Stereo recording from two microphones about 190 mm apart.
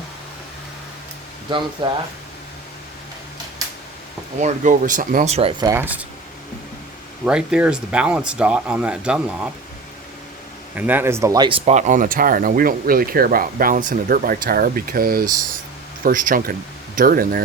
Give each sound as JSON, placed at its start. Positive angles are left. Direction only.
{"t": 1.5, "sound": "speech", "side_deg": -25}
{"t": 4.4, "sound": "speech", "side_deg": -40}
{"t": 7.3, "sound": "speech", "side_deg": -5}
{"t": 10.8, "sound": "speech", "side_deg": -10}